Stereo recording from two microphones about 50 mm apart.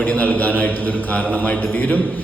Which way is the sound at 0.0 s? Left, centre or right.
Left.